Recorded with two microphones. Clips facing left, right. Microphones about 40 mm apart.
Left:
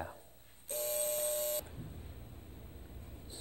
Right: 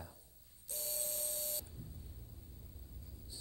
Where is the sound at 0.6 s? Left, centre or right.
Left.